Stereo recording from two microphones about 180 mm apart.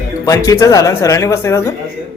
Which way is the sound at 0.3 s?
15° left (ahead or behind).